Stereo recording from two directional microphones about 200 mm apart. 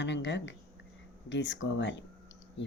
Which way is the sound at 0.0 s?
60° left (ahead or behind).